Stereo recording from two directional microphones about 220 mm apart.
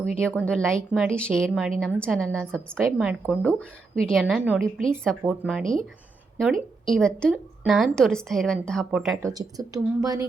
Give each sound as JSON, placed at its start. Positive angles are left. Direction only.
{"t": 0.0, "sound": "a woman's voice", "side_deg": 5}
{"t": 9.2, "sound": "speech", "side_deg": -15}